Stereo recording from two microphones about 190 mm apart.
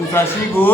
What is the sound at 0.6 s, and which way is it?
Speech, 10° left (ahead or behind).